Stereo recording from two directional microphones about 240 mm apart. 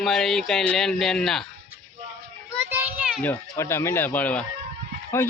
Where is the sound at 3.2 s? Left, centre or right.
Centre.